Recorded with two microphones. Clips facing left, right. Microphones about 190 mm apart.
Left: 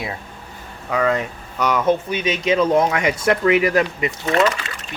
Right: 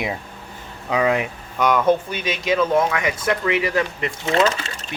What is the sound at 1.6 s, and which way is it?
Speech, 5° left (ahead or behind).